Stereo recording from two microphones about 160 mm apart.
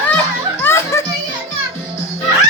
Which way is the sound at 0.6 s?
15° left (ahead or behind).